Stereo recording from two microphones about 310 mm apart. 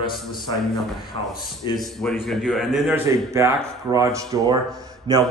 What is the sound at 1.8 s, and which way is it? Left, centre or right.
A man's voice, centre.